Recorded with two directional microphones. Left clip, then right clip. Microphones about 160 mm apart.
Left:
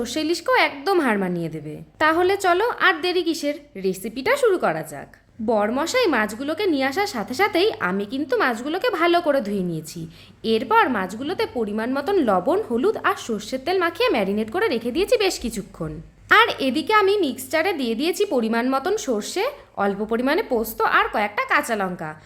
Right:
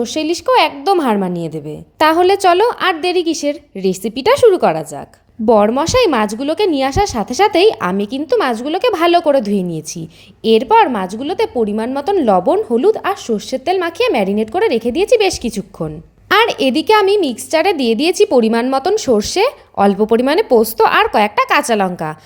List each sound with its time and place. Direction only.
0.0 s a woman's voice: 20° right (ahead or behind); by 22.1 s 40° right (ahead or behind)